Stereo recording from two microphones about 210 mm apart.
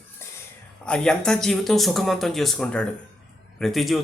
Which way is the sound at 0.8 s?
5° left (ahead or behind).